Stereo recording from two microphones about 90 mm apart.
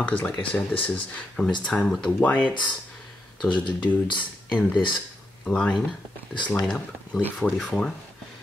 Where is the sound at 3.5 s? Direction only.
55° left (ahead or behind).